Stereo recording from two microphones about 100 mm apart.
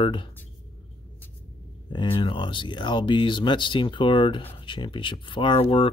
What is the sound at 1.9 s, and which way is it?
Speech, 55° left (ahead or behind).